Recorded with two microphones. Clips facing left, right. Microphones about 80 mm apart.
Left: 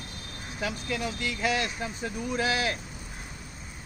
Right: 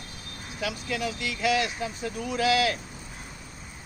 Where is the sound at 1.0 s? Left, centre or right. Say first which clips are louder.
Right 2 dB; left.